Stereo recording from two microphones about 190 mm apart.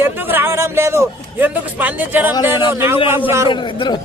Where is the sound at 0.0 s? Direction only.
10° right (ahead or behind).